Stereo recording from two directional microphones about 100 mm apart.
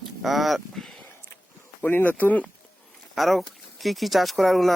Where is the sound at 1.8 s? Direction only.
20° left (ahead or behind).